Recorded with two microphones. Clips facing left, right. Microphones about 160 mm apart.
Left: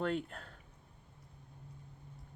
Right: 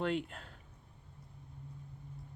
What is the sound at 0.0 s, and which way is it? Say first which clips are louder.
Speech: right 1 dB; 40° left (ahead or behind).